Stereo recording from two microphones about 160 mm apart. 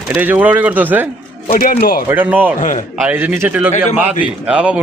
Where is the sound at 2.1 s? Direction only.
10° right (ahead or behind).